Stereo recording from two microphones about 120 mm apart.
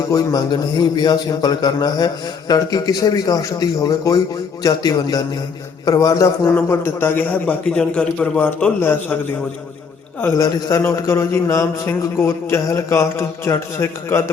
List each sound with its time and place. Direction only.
0.1 s a man's voice: 30° left (ahead or behind)
6.5 s a man's voice: 15° left (ahead or behind)
10.3 s a man's voice: 30° left (ahead or behind)